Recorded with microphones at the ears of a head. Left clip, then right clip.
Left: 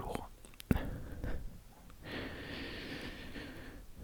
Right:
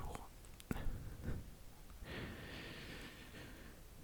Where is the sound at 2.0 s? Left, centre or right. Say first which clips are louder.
Left 6 dB; left.